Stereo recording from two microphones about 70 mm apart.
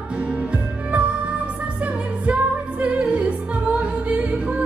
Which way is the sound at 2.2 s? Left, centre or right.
Centre.